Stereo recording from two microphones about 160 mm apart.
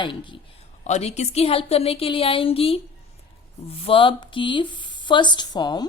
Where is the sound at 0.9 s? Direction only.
45° left (ahead or behind).